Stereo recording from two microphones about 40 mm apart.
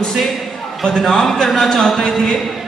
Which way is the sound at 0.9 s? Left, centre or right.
Centre.